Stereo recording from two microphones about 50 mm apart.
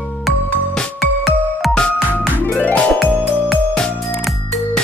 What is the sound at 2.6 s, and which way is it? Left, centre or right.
Music, left.